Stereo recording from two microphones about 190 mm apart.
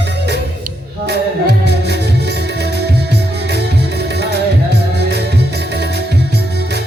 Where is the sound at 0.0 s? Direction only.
65° right (ahead or behind).